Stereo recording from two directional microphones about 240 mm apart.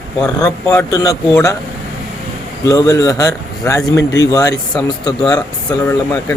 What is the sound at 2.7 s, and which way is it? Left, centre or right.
A man's voice, centre.